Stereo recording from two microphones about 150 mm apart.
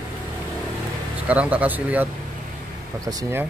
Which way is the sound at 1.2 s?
10° right (ahead or behind).